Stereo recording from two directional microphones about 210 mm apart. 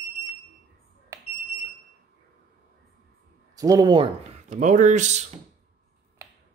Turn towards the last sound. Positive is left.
turn(degrees=-35)  # may be behind; listen again after turning